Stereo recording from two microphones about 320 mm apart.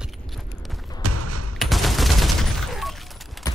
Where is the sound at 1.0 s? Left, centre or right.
Right.